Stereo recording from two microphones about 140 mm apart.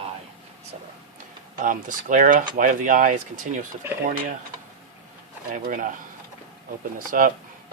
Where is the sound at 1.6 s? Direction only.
70° right (ahead or behind).